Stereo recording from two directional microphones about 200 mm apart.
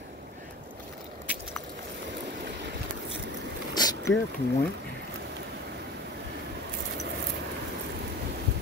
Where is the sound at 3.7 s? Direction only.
20° left (ahead or behind).